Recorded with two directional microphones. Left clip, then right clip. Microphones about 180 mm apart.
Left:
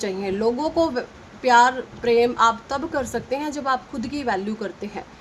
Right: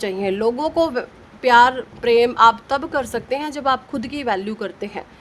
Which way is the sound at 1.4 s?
60° right (ahead or behind).